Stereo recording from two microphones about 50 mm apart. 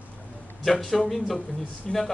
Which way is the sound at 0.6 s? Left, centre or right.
Centre.